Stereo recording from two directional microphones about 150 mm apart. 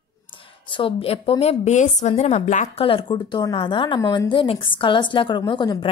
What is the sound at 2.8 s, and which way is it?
A woman's voice, 35° left (ahead or behind).